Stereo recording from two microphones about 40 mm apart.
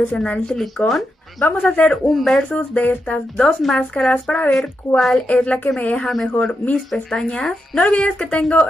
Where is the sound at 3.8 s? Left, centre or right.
Left.